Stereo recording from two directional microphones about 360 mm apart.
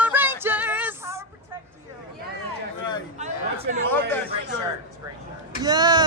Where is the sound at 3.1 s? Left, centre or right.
Centre.